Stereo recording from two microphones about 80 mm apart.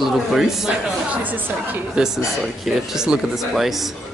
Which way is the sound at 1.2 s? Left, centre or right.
Right.